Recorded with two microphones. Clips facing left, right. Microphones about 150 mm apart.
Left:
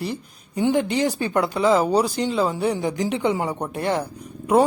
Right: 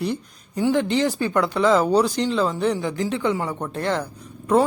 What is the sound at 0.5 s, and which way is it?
Speech, 15° left (ahead or behind).